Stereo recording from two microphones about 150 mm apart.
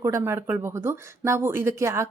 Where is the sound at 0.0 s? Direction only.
20° right (ahead or behind).